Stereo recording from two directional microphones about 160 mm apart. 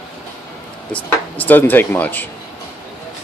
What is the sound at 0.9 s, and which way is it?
Speech, 10° left (ahead or behind).